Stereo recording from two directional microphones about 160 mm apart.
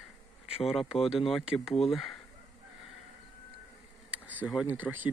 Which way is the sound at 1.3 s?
Centre (ahead or behind).